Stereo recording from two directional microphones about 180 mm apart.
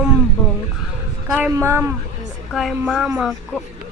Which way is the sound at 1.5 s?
15° right (ahead or behind).